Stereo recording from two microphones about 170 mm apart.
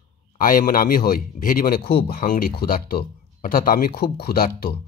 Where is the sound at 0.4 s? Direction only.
55° left (ahead or behind).